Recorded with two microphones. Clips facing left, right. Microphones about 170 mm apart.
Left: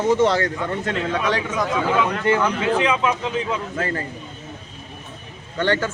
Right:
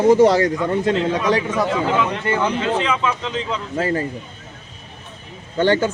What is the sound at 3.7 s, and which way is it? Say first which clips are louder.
Speech: right 9 dB; 30° right (ahead or behind).